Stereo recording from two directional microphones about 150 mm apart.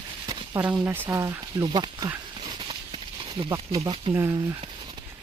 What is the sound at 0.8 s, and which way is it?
Speech, 15° right (ahead or behind).